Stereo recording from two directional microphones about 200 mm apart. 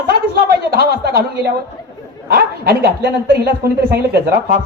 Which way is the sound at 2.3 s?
50° right (ahead or behind).